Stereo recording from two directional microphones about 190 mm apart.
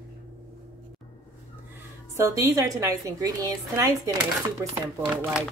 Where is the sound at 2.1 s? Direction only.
15° right (ahead or behind).